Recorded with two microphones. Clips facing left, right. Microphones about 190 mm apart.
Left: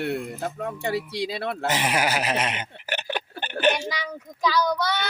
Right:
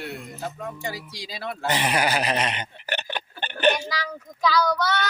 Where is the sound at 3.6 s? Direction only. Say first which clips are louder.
Right 1 dB; 5° left (ahead or behind).